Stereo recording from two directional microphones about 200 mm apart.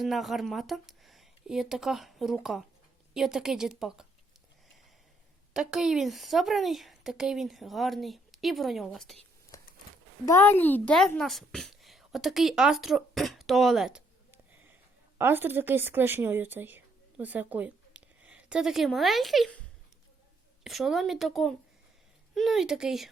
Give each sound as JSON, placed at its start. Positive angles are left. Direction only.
{"t": 0.0, "sound": "a woman's voice", "side_deg": 0}
{"t": 5.5, "sound": "a woman's voice", "side_deg": -5}
{"t": 9.5, "sound": "a sound", "side_deg": 15}
{"t": 10.2, "sound": "a woman's voice", "side_deg": 10}
{"t": 20.7, "sound": "a woman's voice", "side_deg": 0}